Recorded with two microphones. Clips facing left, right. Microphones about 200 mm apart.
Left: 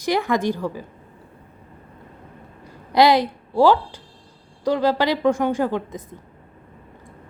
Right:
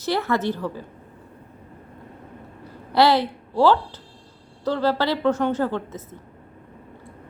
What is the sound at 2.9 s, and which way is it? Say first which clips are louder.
A woman's voice: left 2 dB; 15° left (ahead or behind).